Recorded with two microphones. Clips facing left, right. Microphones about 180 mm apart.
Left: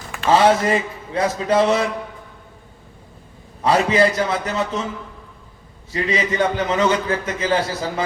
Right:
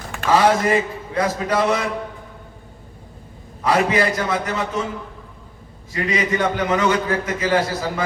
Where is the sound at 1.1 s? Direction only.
25° left (ahead or behind).